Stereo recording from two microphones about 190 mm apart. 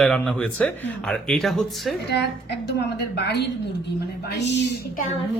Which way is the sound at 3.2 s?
60° left (ahead or behind).